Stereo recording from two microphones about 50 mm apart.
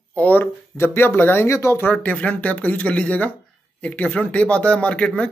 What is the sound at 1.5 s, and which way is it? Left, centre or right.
Speech, left.